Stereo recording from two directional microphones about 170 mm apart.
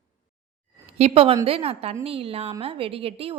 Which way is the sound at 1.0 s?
35° right (ahead or behind).